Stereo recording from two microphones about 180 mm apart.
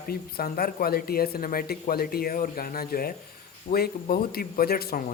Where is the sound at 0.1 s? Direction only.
55° left (ahead or behind).